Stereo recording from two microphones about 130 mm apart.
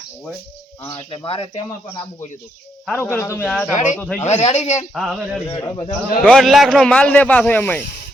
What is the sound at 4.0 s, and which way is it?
Speech, 15° left (ahead or behind).